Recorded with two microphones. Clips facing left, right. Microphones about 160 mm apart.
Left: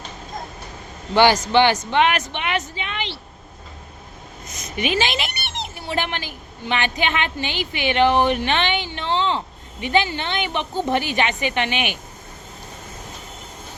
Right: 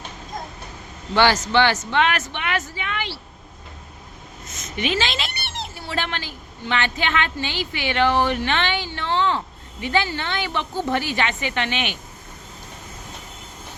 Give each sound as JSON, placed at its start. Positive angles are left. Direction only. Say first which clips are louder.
{"t": 1.1, "sound": "a man's voice", "louder": "left 3 dB", "side_deg": 15}
{"t": 4.8, "sound": "a woman's voice", "louder": "left 2 dB", "side_deg": 15}